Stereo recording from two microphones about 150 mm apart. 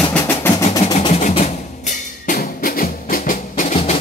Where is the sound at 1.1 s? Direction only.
50° left (ahead or behind).